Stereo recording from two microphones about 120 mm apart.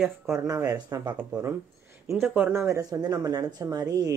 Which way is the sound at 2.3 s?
15° right (ahead or behind).